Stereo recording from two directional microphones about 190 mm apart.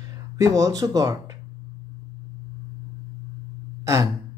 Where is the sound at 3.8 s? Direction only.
15° right (ahead or behind).